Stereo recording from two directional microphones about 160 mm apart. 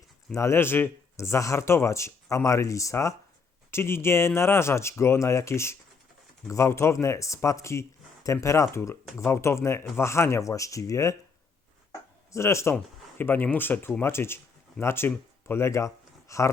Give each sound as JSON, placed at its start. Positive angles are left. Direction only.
{"t": 0.3, "sound": "speech", "side_deg": 15}
{"t": 11.9, "sound": "a sound", "side_deg": 20}
{"t": 13.1, "sound": "speech", "side_deg": 15}